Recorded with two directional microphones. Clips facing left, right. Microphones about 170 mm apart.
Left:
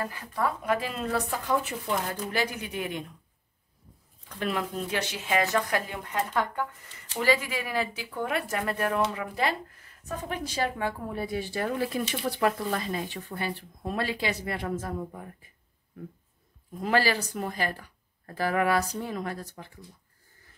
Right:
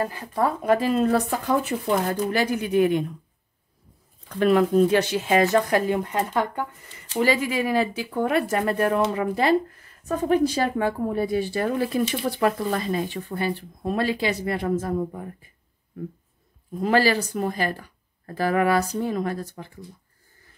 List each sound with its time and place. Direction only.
0.0 s speech: 30° right (ahead or behind); by 3.0 s 50° right (ahead or behind)
4.4 s speech: 50° right (ahead or behind)
16.8 s speech: 35° right (ahead or behind)